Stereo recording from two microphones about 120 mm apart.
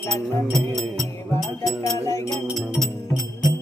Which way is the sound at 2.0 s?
25° left (ahead or behind).